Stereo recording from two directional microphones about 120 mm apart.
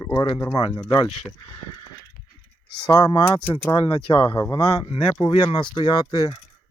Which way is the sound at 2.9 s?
35° left (ahead or behind).